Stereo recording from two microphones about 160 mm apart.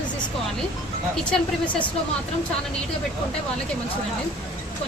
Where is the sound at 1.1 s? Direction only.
5° left (ahead or behind).